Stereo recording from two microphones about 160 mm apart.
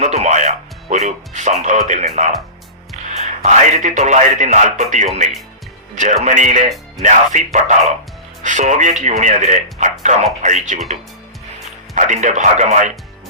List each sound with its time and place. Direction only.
0.0 s a man's voice: 45° right (ahead or behind)
11.9 s speech: 50° right (ahead or behind)